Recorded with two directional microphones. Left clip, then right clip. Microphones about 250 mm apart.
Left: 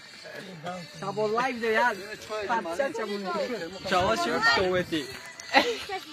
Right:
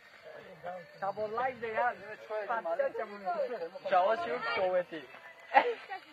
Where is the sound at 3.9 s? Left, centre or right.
Left.